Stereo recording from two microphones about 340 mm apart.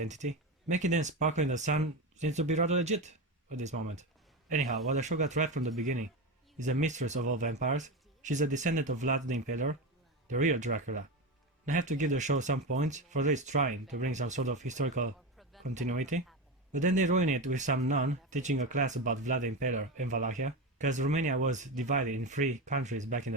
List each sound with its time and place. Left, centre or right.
0.0 s speech: right